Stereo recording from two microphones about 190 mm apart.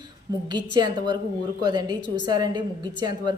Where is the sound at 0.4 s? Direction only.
20° right (ahead or behind).